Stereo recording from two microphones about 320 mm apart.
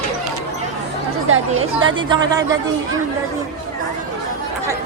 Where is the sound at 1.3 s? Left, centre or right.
Right.